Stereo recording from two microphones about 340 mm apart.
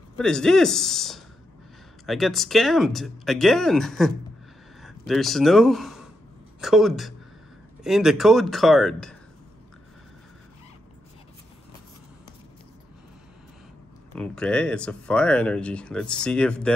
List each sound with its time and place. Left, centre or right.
0.2 s a man's voice: centre
14.1 s speech: centre